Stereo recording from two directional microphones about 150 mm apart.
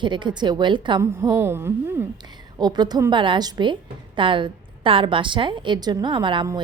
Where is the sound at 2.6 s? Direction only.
30° right (ahead or behind).